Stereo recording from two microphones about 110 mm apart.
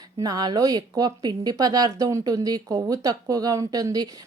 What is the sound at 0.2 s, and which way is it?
Speech, 35° right (ahead or behind).